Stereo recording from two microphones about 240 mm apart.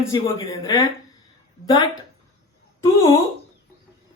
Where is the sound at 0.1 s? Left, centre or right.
Centre.